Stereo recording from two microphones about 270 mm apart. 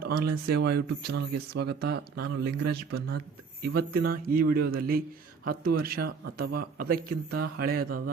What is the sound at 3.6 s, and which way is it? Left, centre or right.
A man's voice, right.